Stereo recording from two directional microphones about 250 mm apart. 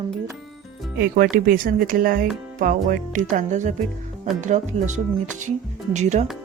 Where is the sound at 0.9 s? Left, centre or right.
Right.